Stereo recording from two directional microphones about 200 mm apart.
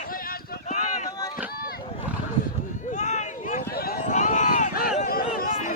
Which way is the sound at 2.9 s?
35° left (ahead or behind).